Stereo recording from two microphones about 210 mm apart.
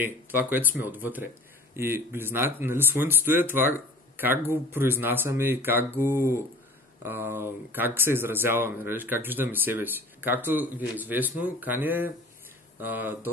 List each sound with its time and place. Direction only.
0.0 s speech: 10° right (ahead or behind)